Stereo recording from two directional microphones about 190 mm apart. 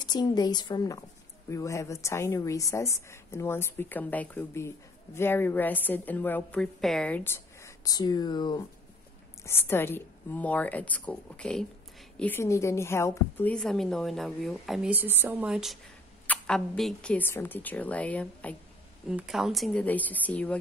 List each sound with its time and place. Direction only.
0.0 s a woman's voice: 20° left (ahead or behind)
9.4 s a woman's voice: 10° left (ahead or behind)